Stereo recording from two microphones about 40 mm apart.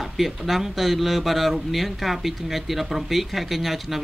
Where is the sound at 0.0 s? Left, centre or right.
Centre.